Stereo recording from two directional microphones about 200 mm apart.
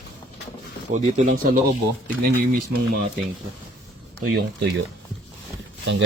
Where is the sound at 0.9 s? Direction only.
35° right (ahead or behind).